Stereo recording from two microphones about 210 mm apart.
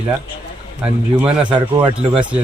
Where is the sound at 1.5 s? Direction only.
20° right (ahead or behind).